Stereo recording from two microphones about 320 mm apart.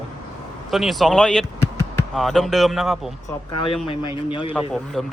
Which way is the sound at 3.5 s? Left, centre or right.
Centre.